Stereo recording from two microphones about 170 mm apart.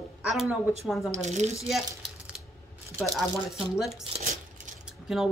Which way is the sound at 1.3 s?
40° right (ahead or behind).